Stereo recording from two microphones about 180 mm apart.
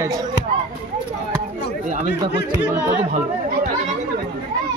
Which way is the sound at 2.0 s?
75° left (ahead or behind).